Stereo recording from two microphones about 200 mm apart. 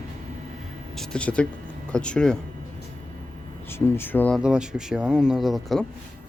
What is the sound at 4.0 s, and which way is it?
Speech, 10° left (ahead or behind).